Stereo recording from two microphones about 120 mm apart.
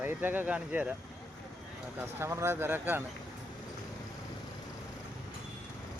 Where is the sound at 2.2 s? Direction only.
20° right (ahead or behind).